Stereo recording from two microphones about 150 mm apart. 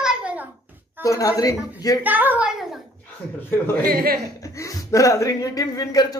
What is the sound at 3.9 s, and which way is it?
Speech, 75° right (ahead or behind).